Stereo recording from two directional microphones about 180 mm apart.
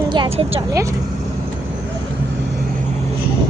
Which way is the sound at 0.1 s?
30° right (ahead or behind).